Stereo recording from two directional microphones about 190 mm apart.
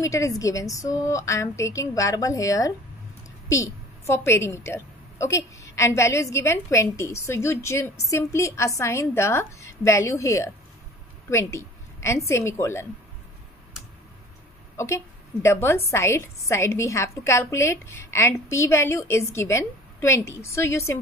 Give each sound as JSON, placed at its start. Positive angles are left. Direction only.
{"t": 0.0, "sound": "a woman's voice", "side_deg": 15}
{"t": 15.4, "sound": "a woman's voice", "side_deg": 15}